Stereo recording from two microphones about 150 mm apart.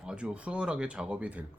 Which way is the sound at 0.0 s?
5° right (ahead or behind).